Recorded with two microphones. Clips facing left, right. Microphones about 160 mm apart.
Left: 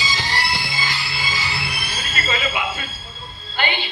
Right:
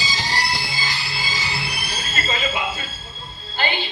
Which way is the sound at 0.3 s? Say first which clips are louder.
Even; 35° right (ahead or behind).